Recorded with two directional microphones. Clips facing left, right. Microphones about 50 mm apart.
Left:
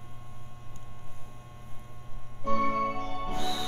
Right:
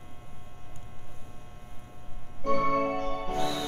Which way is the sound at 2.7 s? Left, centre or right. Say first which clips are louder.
Right 3 dB; right.